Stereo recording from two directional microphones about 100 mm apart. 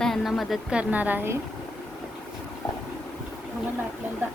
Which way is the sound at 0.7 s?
15° right (ahead or behind).